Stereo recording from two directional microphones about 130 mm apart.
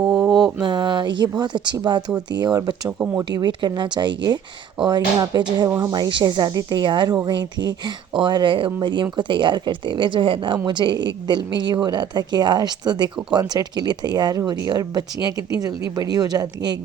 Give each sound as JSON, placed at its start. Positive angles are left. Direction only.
{"t": 0.0, "sound": "mantra", "side_deg": -5}
{"t": 0.6, "sound": "a sound", "side_deg": -35}
{"t": 1.4, "sound": "speech", "side_deg": -35}